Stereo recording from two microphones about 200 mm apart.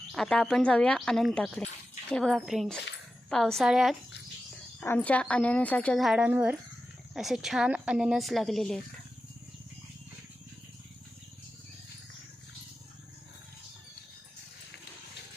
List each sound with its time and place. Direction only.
0.1 s a woman's voice: centre (ahead or behind)
4.8 s a woman's voice: 10° left (ahead or behind)